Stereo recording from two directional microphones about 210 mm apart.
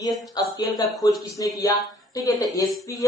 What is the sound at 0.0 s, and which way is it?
Speech, 15° left (ahead or behind).